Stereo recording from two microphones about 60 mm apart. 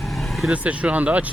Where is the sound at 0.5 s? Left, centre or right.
Right.